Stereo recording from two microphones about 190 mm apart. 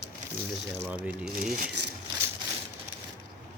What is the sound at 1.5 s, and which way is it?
Speech, 50° right (ahead or behind).